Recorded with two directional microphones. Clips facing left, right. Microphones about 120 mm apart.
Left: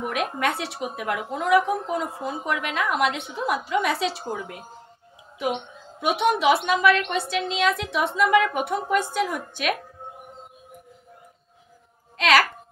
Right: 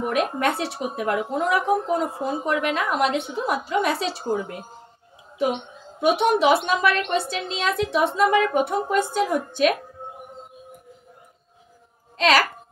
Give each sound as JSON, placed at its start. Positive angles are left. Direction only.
{"t": 0.1, "sound": "a woman's voice", "side_deg": -35}
{"t": 5.9, "sound": "a woman's voice", "side_deg": -35}
{"t": 12.2, "sound": "a woman's voice", "side_deg": -30}